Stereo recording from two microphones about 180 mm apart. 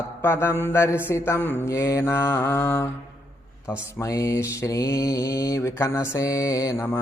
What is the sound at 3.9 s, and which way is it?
Mantra, 15° left (ahead or behind).